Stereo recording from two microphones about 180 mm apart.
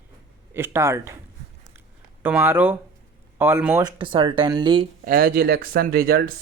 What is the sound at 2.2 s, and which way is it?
A man's voice, 10° right (ahead or behind).